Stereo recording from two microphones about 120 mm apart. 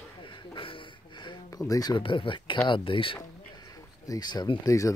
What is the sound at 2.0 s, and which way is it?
Speech, 45° left (ahead or behind).